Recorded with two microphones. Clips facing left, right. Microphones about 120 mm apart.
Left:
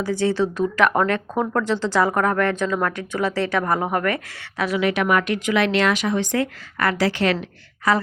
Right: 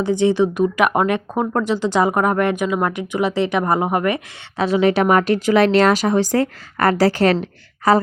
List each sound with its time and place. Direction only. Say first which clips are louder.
0.0 s a woman's voice: right 5 dB; 20° right (ahead or behind); by 8.0 s 35° right (ahead or behind)